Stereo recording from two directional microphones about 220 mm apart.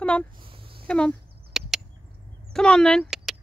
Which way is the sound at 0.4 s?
25° right (ahead or behind).